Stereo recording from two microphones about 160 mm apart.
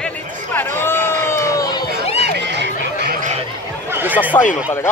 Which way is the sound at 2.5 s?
90° right.